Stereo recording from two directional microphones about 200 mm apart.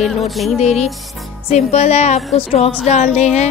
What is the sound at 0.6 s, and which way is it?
A woman's voice, 35° left (ahead or behind).